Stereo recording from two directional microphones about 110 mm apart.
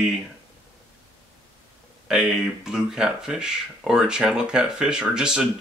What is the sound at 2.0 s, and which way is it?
Speech, 5° right (ahead or behind).